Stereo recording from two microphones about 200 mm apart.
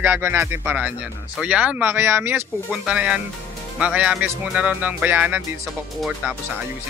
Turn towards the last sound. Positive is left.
turn(degrees=-5)  # may be behind; listen again after turning